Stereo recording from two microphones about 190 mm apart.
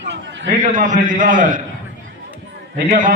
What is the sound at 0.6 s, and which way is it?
A man's voice, 40° right (ahead or behind).